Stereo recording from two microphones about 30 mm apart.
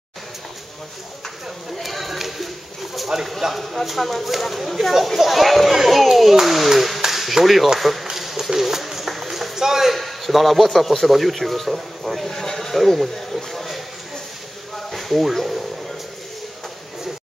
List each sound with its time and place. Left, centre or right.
1.8 s speech: centre
3.5 s a man's voice: centre
8.2 s a sound: centre
9.9 s a man's voice: centre
12.3 s speech: centre
12.7 s a man's voice: centre
14.9 s a sound: centre